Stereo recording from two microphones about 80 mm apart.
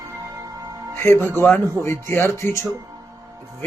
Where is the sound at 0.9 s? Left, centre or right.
Left.